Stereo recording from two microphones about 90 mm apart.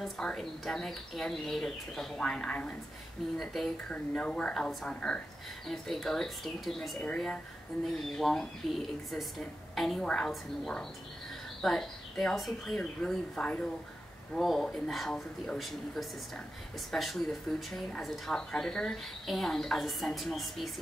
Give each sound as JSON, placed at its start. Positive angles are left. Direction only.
{"t": 0.0, "sound": "speech", "side_deg": 5}
{"t": 3.9, "sound": "speech", "side_deg": 10}
{"t": 7.0, "sound": "speech", "side_deg": 10}
{"t": 14.3, "sound": "speech", "side_deg": 0}